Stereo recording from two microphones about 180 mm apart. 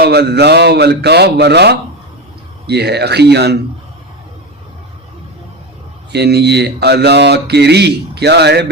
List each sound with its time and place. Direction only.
0.0 s speech: 65° right (ahead or behind)
6.1 s speech: 65° right (ahead or behind)